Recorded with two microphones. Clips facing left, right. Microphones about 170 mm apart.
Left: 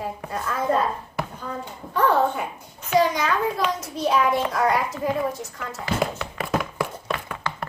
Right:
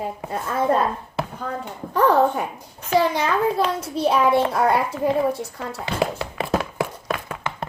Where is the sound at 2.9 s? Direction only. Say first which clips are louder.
Right 1 dB; 30° right (ahead or behind).